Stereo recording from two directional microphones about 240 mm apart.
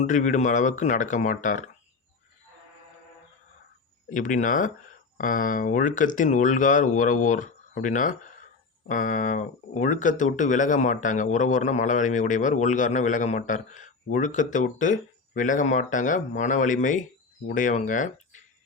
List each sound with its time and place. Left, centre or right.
0.0 s speech: left
4.1 s speech: left